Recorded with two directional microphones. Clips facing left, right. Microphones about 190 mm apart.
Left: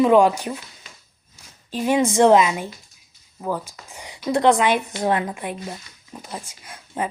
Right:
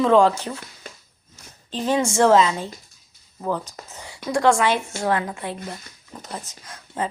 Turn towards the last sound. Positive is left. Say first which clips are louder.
# left 1 dB
turn(degrees=15)  # may be behind; listen again after turning